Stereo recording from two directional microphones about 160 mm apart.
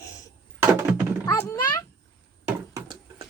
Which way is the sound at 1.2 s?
20° left (ahead or behind).